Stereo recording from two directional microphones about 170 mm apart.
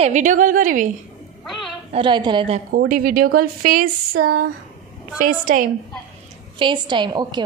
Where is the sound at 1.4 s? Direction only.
Centre (ahead or behind).